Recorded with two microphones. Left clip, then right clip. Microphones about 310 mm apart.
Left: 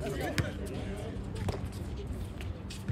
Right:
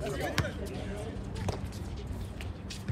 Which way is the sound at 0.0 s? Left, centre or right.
Centre.